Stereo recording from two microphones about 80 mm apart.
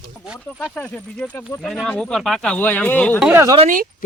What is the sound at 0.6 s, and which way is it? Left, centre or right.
Speech, centre.